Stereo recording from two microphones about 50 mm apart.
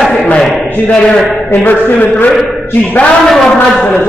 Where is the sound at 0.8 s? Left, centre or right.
Centre.